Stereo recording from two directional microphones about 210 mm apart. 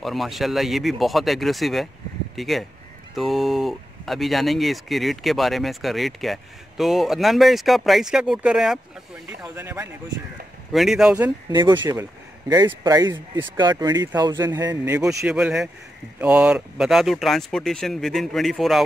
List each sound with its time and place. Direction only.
0.0 s speech: centre (ahead or behind)
11.5 s speech: 20° right (ahead or behind)
15.1 s speech: 5° right (ahead or behind)